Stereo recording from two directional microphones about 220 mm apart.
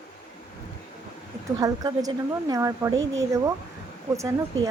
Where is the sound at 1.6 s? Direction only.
15° right (ahead or behind).